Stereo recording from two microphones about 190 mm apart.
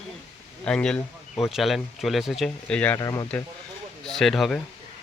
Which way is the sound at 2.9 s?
15° left (ahead or behind).